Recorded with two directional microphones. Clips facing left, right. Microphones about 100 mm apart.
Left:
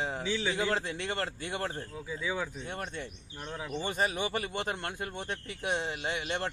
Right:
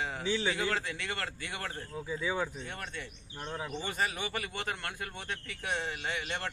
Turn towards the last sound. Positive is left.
turn(degrees=25)  # may be behind; listen again after turning